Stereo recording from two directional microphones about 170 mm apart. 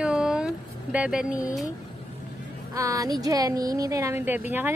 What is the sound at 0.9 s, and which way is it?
Speech, 5° right (ahead or behind).